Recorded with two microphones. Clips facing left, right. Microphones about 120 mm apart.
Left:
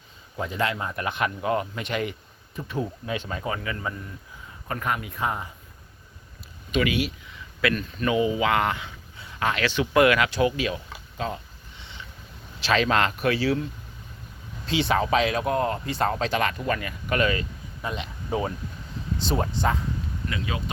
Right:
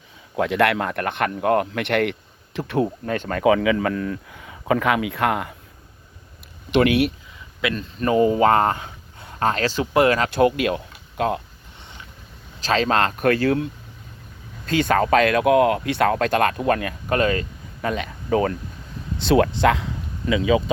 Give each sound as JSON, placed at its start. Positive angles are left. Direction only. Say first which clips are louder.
{"t": 0.3, "sound": "speech", "louder": "right 8 dB", "side_deg": -75}
{"t": 6.7, "sound": "speech", "louder": "right 7 dB", "side_deg": -65}
{"t": 7.6, "sound": "speech", "louder": "right 1 dB", "side_deg": -25}
{"t": 10.2, "sound": "speech", "louder": "right 6 dB", "side_deg": -55}
{"t": 12.6, "sound": "speech", "louder": "right 2 dB", "side_deg": -35}
{"t": 14.7, "sound": "speech", "louder": "right 5 dB", "side_deg": -50}
{"t": 17.8, "sound": "speech", "louder": "right 7 dB", "side_deg": -55}
{"t": 18.3, "sound": "speech", "louder": "right 7 dB", "side_deg": -75}